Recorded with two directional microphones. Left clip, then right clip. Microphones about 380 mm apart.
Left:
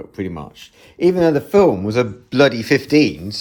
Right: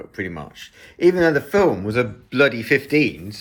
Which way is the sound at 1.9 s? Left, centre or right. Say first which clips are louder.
Left 3 dB; left.